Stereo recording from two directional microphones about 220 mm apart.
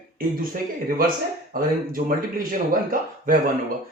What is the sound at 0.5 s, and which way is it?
Speech, 40° right (ahead or behind).